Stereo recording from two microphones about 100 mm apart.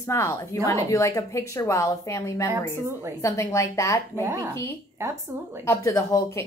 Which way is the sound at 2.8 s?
25° right (ahead or behind).